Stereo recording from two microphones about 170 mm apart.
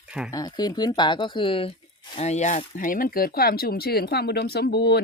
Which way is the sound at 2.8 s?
50° left (ahead or behind).